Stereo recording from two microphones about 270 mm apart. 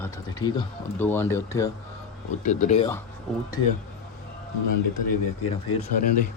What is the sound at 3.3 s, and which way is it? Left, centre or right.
Speech, centre.